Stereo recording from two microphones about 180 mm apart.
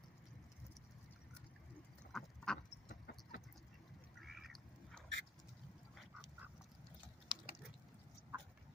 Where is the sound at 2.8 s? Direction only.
50° left (ahead or behind).